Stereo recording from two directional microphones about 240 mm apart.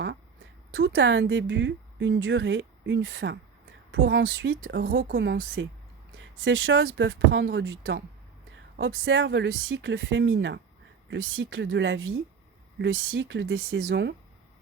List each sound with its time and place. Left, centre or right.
0.7 s speech: right